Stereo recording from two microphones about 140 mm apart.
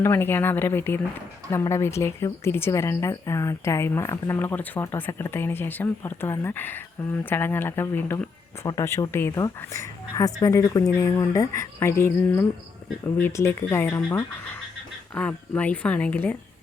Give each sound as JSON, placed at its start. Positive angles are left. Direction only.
{"t": 0.0, "sound": "a woman's voice", "side_deg": 15}